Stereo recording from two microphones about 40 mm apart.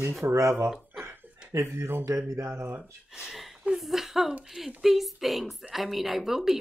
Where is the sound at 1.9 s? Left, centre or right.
Right.